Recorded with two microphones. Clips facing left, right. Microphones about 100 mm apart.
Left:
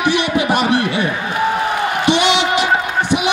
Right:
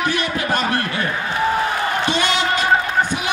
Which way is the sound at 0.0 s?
80° left.